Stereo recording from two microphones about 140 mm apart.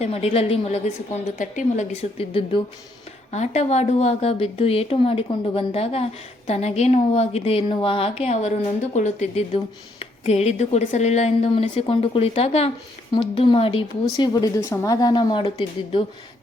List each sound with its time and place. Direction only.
0.0 s speech: 45° left (ahead or behind)
1.4 s speech: 60° left (ahead or behind); by 2.6 s 40° left (ahead or behind)
3.3 s a woman's voice: 55° left (ahead or behind)